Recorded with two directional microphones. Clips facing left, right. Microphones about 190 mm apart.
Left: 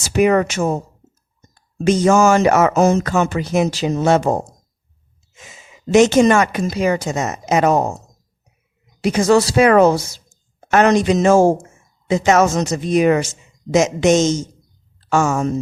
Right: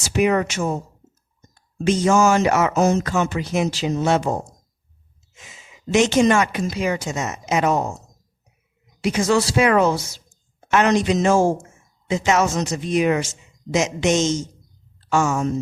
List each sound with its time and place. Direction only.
0.1 s speech: 45° left (ahead or behind)
1.8 s speech: 45° left (ahead or behind)
9.0 s speech: 40° left (ahead or behind)